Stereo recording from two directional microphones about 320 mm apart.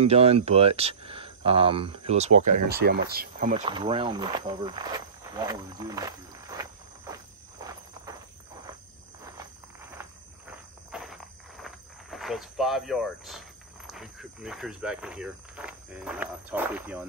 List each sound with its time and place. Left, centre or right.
0.0 s speech: centre
2.7 s speech: right; by 7.2 s centre
9.8 s walk: centre